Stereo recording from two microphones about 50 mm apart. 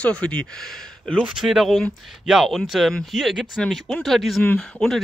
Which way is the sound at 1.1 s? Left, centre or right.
Centre.